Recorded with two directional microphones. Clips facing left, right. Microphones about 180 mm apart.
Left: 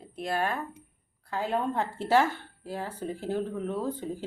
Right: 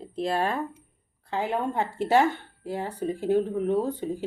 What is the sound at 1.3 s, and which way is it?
Speech, 15° right (ahead or behind).